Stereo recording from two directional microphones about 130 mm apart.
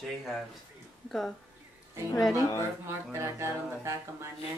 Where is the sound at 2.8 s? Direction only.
20° right (ahead or behind).